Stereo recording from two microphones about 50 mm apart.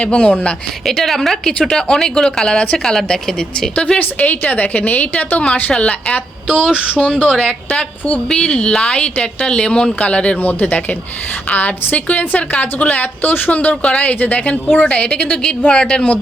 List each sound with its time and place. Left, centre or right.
0.0 s a woman's voice: left
0.9 s a woman's voice: centre
4.2 s a woman's voice: left
7.3 s a woman's voice: centre
7.7 s a woman's voice: left
10.3 s a woman's voice: left